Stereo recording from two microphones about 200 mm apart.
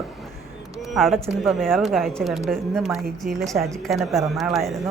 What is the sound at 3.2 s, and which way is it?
Speech, 45° right (ahead or behind).